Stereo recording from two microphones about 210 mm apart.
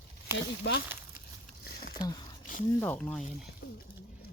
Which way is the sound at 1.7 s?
45° left (ahead or behind).